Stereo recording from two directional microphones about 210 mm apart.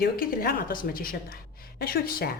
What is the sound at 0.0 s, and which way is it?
A woman's voice, 45° left (ahead or behind).